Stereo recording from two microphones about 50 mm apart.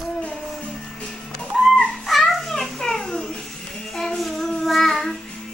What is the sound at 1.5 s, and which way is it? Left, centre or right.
Music, centre.